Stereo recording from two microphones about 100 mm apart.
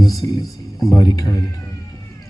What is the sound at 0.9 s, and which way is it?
Speech, 35° left (ahead or behind).